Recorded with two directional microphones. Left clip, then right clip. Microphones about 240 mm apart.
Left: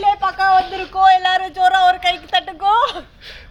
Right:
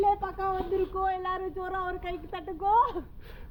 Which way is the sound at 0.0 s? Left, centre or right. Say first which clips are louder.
Left 11 dB; centre.